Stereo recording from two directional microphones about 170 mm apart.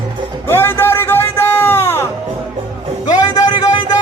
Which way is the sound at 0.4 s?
15° left (ahead or behind).